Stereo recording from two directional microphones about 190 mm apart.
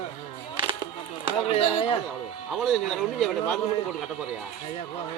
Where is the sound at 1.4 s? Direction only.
30° left (ahead or behind).